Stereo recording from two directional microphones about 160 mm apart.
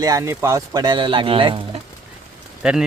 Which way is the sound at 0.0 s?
20° right (ahead or behind).